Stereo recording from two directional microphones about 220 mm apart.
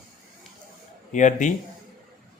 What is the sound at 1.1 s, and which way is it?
Speech, 35° left (ahead or behind).